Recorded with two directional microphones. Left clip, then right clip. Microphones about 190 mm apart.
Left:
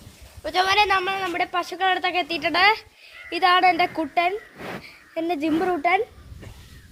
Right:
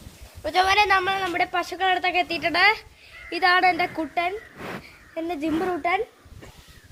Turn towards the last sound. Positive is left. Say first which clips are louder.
# left 3 dB
turn(degrees=50)  # may be behind; listen again after turning